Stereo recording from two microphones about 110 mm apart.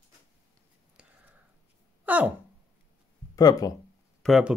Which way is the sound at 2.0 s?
15° right (ahead or behind).